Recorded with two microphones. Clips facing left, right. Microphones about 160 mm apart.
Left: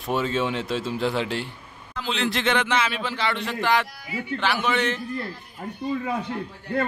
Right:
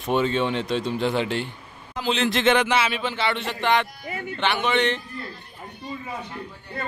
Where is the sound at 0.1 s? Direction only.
5° left (ahead or behind).